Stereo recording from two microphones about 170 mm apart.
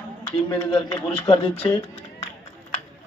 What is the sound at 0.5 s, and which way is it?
A man's voice, 30° left (ahead or behind).